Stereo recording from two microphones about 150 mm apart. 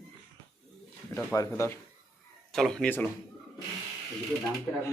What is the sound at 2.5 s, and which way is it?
Speech, 5° left (ahead or behind).